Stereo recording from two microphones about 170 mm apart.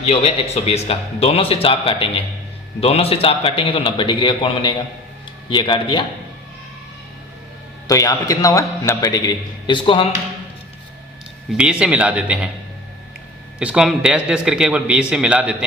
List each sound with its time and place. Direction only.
0.0 s a man's voice: 35° left (ahead or behind)
7.9 s a man's voice: 20° left (ahead or behind)
11.5 s speech: 5° right (ahead or behind)
13.6 s a man's voice: 5° right (ahead or behind)